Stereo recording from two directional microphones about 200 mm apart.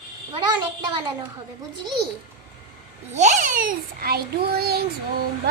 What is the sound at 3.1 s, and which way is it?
A child's voice, 35° right (ahead or behind).